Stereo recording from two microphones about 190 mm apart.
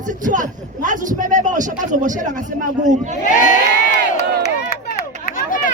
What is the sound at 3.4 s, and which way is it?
Crowd, 40° left (ahead or behind).